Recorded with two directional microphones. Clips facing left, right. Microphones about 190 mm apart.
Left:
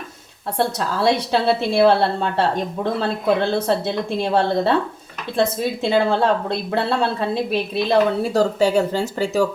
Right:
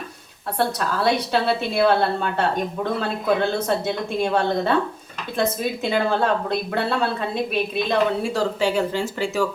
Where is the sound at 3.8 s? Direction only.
30° left (ahead or behind).